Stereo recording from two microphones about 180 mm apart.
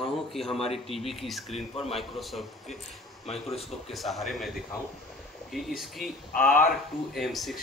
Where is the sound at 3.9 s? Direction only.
Centre (ahead or behind).